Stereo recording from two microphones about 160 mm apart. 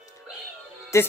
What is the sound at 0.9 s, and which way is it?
Speech, 20° left (ahead or behind).